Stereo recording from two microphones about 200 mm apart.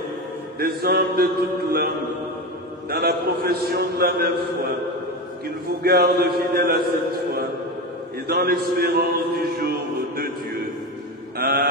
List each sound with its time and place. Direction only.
0.6 s a man's voice: 50° right (ahead or behind)
2.9 s a man's voice: 50° right (ahead or behind)
5.8 s a man's voice: 50° right (ahead or behind)
8.3 s a man's voice: 50° right (ahead or behind)
11.3 s mantra: 55° right (ahead or behind)